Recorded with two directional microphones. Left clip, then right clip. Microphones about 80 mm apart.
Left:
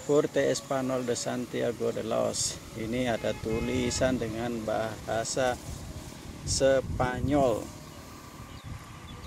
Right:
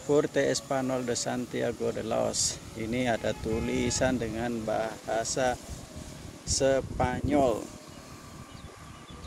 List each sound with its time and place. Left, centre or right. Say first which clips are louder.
0.1 s speech: even; right
2.9 s speech: right 1 dB; right
6.6 s speech: left 1 dB; right